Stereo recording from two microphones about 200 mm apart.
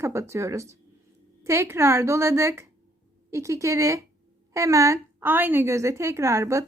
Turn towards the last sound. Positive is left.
turn(degrees=-15)  # may be behind; listen again after turning